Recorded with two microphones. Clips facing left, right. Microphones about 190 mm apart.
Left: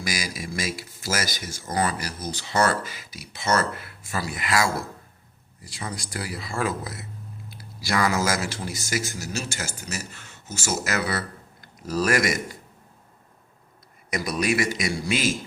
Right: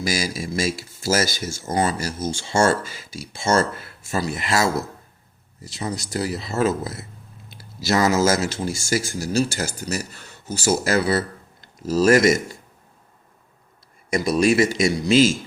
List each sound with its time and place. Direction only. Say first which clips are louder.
0.0 s speech: right 6 dB; 25° right (ahead or behind)
14.1 s speech: right 7 dB; 25° right (ahead or behind)